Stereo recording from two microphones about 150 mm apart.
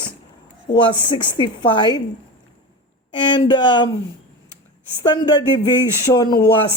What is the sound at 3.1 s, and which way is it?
Speech, 30° left (ahead or behind).